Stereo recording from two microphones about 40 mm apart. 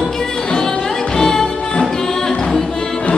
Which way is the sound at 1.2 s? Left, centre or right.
Centre.